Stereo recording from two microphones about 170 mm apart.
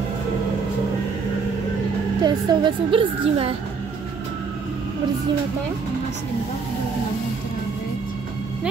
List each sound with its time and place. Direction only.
2.2 s a woman's voice: 30° right (ahead or behind)